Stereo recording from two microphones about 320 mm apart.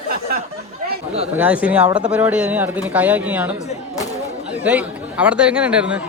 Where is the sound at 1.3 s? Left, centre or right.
Centre.